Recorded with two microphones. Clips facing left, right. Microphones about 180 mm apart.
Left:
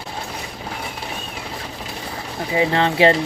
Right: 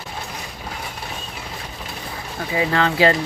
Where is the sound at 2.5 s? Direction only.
25° left (ahead or behind).